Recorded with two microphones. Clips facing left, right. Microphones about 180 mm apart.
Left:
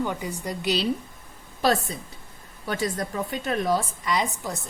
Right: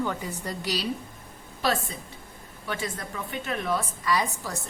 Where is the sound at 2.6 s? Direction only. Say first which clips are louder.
Left 5 dB; 40° left (ahead or behind).